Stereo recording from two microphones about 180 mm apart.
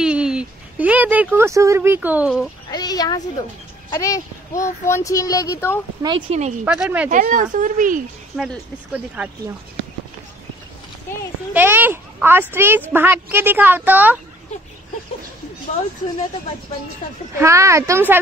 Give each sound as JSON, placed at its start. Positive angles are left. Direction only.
{"t": 0.0, "sound": "a woman's voice", "side_deg": -5}
{"t": 2.7, "sound": "a sound", "side_deg": 20}
{"t": 3.9, "sound": "a child's voice", "side_deg": 15}
{"t": 6.0, "sound": "speech", "side_deg": -20}
{"t": 6.6, "sound": "a woman's voice", "side_deg": -5}
{"t": 7.1, "sound": "speech", "side_deg": -45}
{"t": 8.4, "sound": "a woman's voice", "side_deg": -5}
{"t": 11.5, "sound": "a woman's voice", "side_deg": -10}
{"t": 17.4, "sound": "a woman's voice", "side_deg": -15}